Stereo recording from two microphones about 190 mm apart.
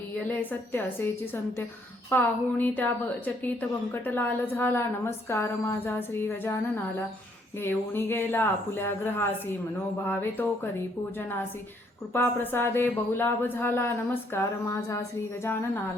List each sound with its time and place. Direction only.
0.3 s speech: 10° left (ahead or behind)
7.6 s speech: 10° left (ahead or behind)
12.1 s speech: 10° left (ahead or behind)